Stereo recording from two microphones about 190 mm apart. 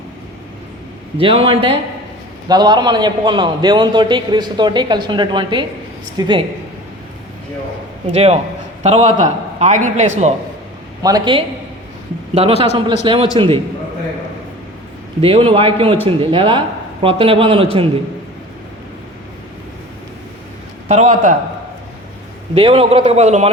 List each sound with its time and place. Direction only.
1.2 s a man's voice: 30° right (ahead or behind)
8.0 s a man's voice: 30° right (ahead or behind)
11.0 s a man's voice: 25° right (ahead or behind)
12.3 s a man's voice: 35° right (ahead or behind)
15.2 s a man's voice: 30° right (ahead or behind)
20.8 s a man's voice: 40° right (ahead or behind)
22.5 s a man's voice: 30° right (ahead or behind)